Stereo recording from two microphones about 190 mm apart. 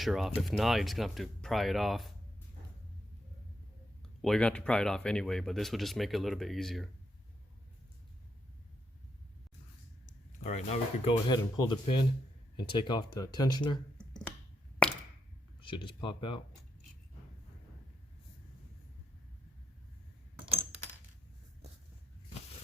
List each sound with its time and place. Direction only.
0.0 s speech: centre (ahead or behind)
4.2 s speech: 5° left (ahead or behind)
10.4 s speech: 40° left (ahead or behind)
11.3 s speech: 25° left (ahead or behind)
14.0 s finger snapping: 5° left (ahead or behind)
15.6 s speech: 25° left (ahead or behind)